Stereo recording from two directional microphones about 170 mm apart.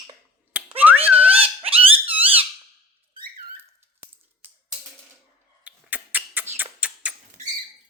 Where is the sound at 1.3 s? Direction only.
35° right (ahead or behind).